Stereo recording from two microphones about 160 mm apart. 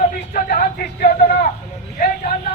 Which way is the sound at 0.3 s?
65° left (ahead or behind).